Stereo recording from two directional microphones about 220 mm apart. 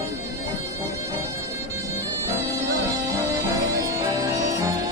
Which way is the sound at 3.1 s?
15° right (ahead or behind).